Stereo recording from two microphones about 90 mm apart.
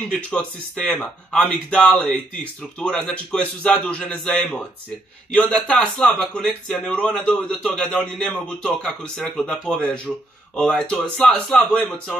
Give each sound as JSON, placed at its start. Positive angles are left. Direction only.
{"t": 0.1, "sound": "a man's voice", "side_deg": 10}